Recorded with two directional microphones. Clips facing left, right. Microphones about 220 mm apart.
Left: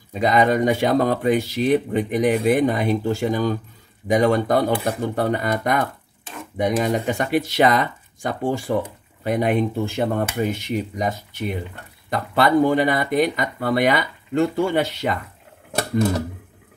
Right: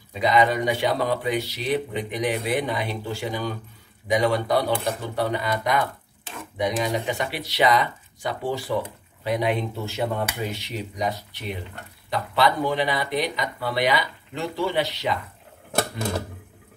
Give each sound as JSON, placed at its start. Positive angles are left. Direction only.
{"t": 0.1, "sound": "speech", "side_deg": 45}